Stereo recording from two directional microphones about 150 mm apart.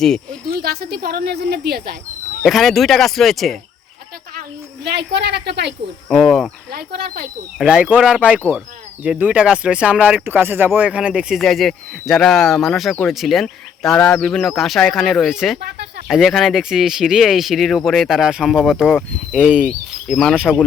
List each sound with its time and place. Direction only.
0.0 s speech: 5° left (ahead or behind)
0.5 s speech: 90° right
2.4 s speech: centre (ahead or behind)
4.4 s speech: 90° right
6.1 s speech: centre (ahead or behind)
6.7 s speech: 90° right
7.6 s speech: 5° right (ahead or behind)